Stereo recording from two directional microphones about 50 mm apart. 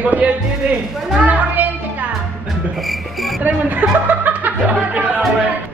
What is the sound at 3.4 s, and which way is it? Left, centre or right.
Speech, right.